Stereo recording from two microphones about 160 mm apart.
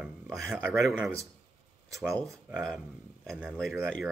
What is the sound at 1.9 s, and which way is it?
Speech, 20° right (ahead or behind).